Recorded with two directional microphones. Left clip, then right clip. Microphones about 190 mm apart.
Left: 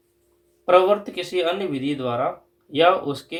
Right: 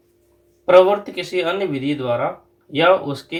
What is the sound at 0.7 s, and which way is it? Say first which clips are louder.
Speech: right 4 dB; 35° left (ahead or behind).